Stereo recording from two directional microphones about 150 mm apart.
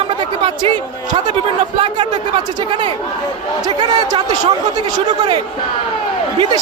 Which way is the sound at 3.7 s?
30° right (ahead or behind).